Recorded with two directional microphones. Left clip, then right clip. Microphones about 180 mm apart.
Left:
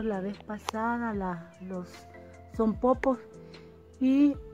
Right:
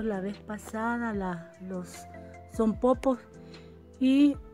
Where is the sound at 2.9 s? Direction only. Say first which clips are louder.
Even; 15° right (ahead or behind).